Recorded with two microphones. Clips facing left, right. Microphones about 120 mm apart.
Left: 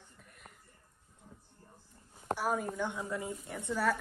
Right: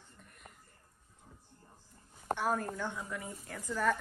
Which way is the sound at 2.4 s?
5° left (ahead or behind).